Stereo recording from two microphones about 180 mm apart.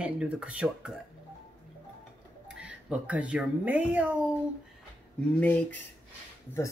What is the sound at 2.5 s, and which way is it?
Speech, 5° right (ahead or behind).